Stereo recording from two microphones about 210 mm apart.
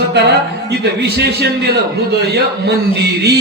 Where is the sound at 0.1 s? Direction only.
55° right (ahead or behind).